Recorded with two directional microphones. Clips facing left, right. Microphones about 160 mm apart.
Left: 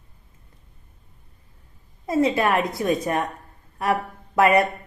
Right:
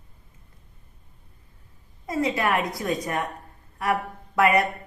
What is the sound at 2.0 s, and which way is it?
A woman's voice, 25° left (ahead or behind).